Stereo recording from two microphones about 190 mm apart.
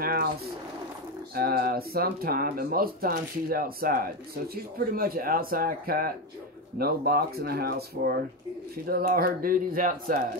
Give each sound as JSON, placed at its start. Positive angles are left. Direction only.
{"t": 0.0, "sound": "speech", "side_deg": -50}
{"t": 1.3, "sound": "speech", "side_deg": -50}